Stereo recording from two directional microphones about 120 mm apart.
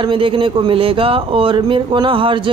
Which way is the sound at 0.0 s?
45° right (ahead or behind).